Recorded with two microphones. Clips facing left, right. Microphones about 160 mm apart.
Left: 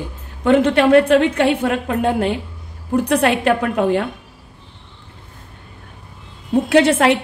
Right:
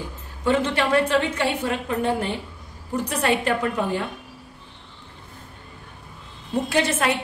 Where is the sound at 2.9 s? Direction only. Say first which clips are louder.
Left 7 dB; 65° left (ahead or behind).